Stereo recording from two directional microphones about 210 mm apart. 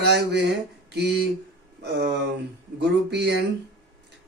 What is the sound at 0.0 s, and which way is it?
Speech, 50° right (ahead or behind).